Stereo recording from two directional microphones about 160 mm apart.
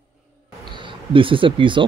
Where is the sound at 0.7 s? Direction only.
30° right (ahead or behind).